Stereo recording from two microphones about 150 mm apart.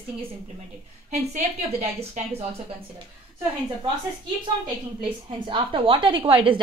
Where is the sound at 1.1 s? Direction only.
50° right (ahead or behind).